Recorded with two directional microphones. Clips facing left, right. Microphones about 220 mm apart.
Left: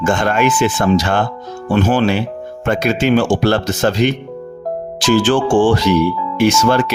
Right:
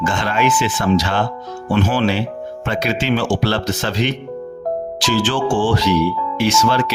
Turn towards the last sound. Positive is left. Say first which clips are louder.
# left 4 dB
turn(degrees=50)  # may be behind; listen again after turning